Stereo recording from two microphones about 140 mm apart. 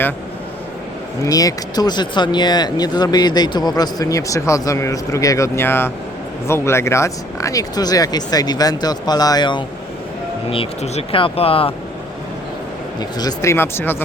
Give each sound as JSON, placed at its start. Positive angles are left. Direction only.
{"t": 1.2, "sound": "speech", "side_deg": 25}
{"t": 10.5, "sound": "speech", "side_deg": 45}
{"t": 13.0, "sound": "speech", "side_deg": 30}